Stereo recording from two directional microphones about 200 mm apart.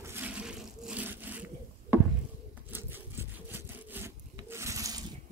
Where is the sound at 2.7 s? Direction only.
10° right (ahead or behind).